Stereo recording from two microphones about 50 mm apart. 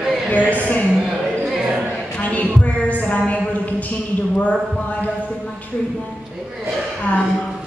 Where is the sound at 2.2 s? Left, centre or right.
Left.